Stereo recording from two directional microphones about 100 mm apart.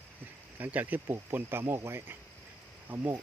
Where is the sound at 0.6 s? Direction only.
15° right (ahead or behind).